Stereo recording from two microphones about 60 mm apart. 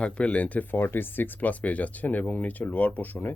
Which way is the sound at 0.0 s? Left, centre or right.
Left.